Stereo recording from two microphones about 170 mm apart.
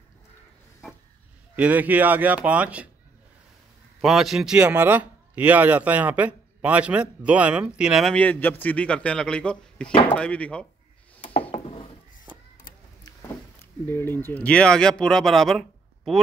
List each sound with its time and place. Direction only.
1.6 s speech: 10° right (ahead or behind)
4.0 s a man's voice: centre (ahead or behind)
11.5 s a sound: 35° left (ahead or behind)
13.8 s a man's voice: 15° left (ahead or behind)